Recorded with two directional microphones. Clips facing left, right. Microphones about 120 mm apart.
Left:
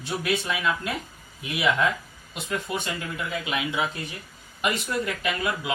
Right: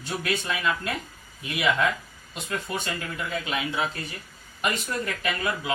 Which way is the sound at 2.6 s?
10° left (ahead or behind).